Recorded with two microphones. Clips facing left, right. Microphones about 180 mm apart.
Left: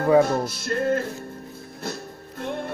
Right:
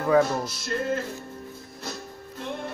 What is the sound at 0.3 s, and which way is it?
Music, 55° left (ahead or behind).